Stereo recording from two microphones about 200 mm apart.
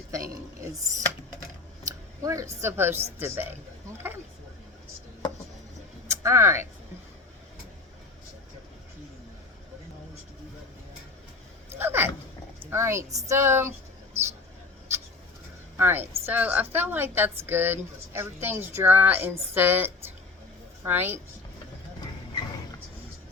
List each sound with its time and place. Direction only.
0.1 s a woman's voice: 15° right (ahead or behind)
6.2 s a woman's voice: 15° right (ahead or behind)
11.8 s a sound: 10° right (ahead or behind)
12.7 s a woman's voice: 15° right (ahead or behind)
15.8 s a woman's voice: 10° right (ahead or behind)